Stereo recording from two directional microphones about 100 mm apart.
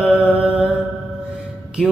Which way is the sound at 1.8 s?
5° right (ahead or behind).